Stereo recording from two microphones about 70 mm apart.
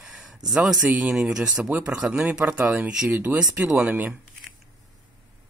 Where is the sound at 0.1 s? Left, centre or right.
Centre.